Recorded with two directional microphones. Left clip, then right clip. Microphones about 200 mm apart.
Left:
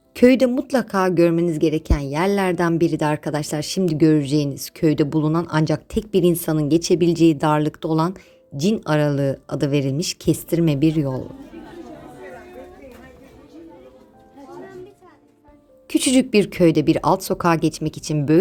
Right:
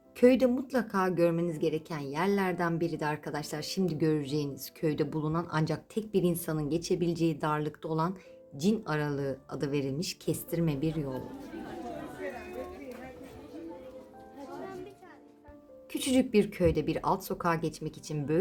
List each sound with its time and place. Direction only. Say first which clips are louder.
0.2 s a woman's voice: left 9 dB; 40° left (ahead or behind)
15.9 s a woman's voice: left 11 dB; 45° left (ahead or behind)